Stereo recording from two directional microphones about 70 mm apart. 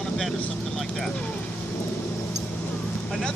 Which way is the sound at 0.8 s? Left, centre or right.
Centre.